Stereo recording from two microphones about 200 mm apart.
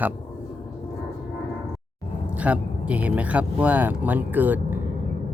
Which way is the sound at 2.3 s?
5° right (ahead or behind).